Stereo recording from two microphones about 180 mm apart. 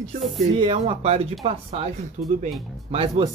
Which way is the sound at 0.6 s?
30° right (ahead or behind).